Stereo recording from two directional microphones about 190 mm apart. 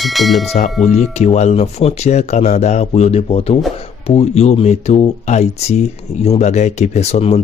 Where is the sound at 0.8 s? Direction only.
35° left (ahead or behind).